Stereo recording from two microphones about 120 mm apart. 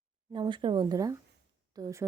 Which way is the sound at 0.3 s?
40° right (ahead or behind).